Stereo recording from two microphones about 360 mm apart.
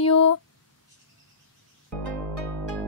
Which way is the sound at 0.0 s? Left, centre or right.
Left.